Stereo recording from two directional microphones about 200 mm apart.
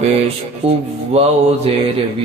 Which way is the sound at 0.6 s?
30° right (ahead or behind).